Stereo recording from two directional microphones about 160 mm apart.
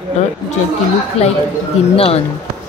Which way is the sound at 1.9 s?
40° left (ahead or behind).